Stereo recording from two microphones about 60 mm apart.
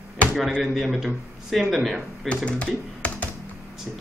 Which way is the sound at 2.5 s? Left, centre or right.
Left.